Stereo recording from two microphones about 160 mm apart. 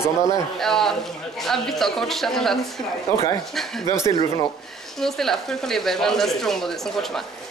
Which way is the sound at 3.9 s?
20° left (ahead or behind).